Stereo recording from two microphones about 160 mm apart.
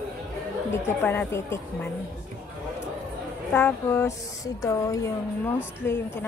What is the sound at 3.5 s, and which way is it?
Speech, 15° left (ahead or behind).